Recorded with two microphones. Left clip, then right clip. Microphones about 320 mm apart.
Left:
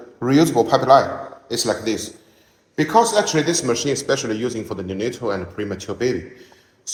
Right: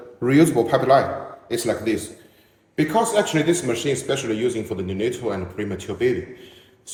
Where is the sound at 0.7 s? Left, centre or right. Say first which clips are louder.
Left 3 dB; centre.